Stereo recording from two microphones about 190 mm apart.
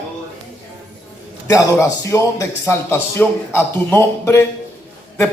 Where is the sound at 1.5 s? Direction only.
20° left (ahead or behind).